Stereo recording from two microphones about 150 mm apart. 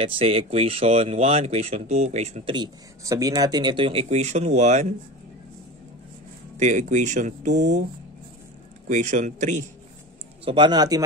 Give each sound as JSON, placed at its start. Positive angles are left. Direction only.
{"t": 0.0, "sound": "speech", "side_deg": -40}
{"t": 2.5, "sound": "speech", "side_deg": -25}
{"t": 6.5, "sound": "speech", "side_deg": -55}
{"t": 8.8, "sound": "speech", "side_deg": -55}
{"t": 10.4, "sound": "speech", "side_deg": -30}